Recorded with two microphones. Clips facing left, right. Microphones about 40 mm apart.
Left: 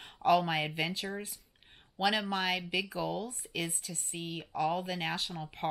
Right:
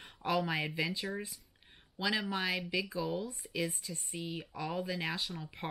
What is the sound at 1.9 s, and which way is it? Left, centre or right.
Speech, left.